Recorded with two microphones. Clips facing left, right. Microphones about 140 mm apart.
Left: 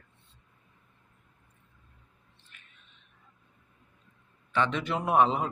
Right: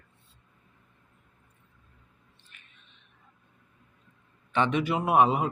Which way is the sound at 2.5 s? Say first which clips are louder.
Left 1 dB; 20° right (ahead or behind).